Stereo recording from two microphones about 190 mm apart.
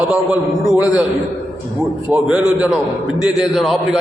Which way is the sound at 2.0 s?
10° right (ahead or behind).